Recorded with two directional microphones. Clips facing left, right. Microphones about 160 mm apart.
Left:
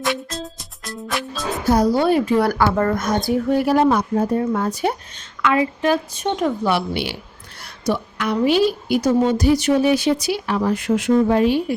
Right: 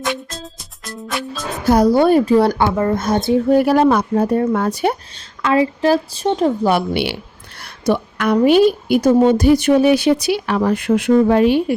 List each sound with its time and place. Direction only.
0.0 s music: centre (ahead or behind)
1.6 s a woman's voice: 70° right (ahead or behind); by 2.2 s 50° right (ahead or behind)
2.2 s a woman's voice: 35° right (ahead or behind)
3.5 s a woman's voice: 65° right (ahead or behind)
5.4 s a woman's voice: 35° right (ahead or behind)
6.9 s a woman's voice: 65° right (ahead or behind)